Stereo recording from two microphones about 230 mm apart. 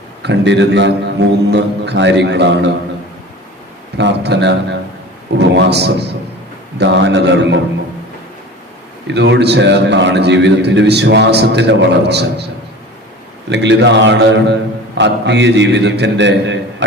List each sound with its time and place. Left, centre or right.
0.2 s a man's voice: right
3.9 s a man's voice: right
9.0 s a man's voice: right
13.5 s a man's voice: right